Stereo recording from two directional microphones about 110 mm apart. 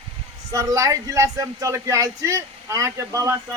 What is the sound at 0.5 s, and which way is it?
Speech, 30° right (ahead or behind).